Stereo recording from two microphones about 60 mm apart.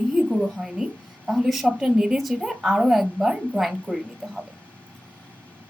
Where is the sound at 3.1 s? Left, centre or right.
Right.